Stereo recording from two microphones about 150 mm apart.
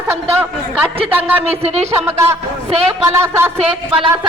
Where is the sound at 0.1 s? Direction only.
15° right (ahead or behind).